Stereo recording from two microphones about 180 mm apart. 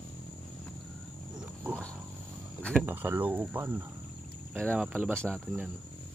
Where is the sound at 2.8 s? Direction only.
10° right (ahead or behind).